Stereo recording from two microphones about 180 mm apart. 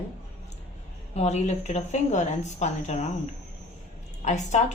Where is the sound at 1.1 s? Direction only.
40° left (ahead or behind).